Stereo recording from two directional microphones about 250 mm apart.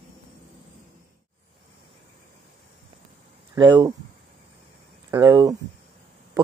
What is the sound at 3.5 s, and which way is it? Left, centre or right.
Speech, centre.